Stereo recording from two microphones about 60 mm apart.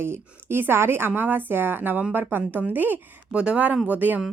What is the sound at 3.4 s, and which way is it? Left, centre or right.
Speech, centre.